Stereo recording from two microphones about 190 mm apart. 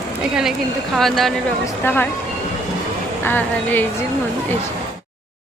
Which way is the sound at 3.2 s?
10° left (ahead or behind).